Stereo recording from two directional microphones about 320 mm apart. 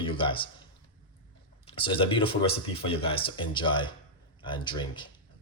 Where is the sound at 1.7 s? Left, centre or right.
Centre.